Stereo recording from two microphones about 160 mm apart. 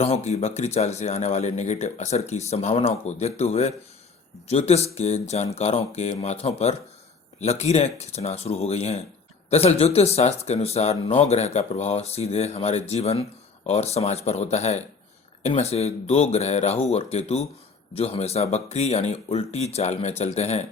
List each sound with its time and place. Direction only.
0.0 s speech: 40° left (ahead or behind)